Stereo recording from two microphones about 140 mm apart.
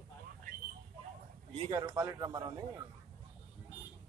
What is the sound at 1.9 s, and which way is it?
Speech, 25° right (ahead or behind).